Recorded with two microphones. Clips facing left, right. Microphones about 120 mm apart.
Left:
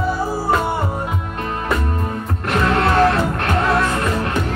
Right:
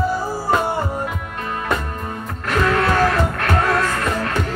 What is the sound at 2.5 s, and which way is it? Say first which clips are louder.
Music: left 1 dB; 25° left (ahead or behind).